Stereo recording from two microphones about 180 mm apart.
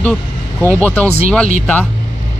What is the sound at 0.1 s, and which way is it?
Speech, 15° right (ahead or behind).